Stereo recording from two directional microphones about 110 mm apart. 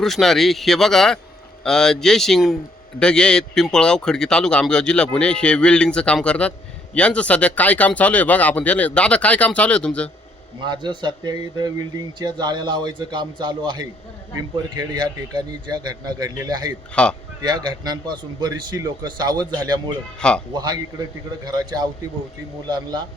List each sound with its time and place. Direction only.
0.0 s speech: centre (ahead or behind)
10.6 s a man's voice: 45° right (ahead or behind)
16.9 s speech: 10° left (ahead or behind)
17.4 s a man's voice: 40° right (ahead or behind)
20.1 s speech: 10° left (ahead or behind)
20.5 s a man's voice: 40° right (ahead or behind)